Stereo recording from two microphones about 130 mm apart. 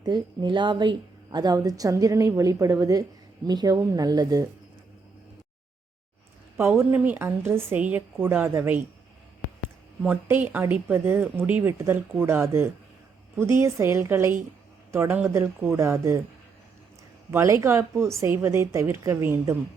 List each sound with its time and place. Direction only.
0.0 s a woman's voice: 35° right (ahead or behind)
6.6 s speech: 15° right (ahead or behind)
10.0 s a woman's voice: 15° right (ahead or behind)
17.3 s a woman's voice: 20° right (ahead or behind)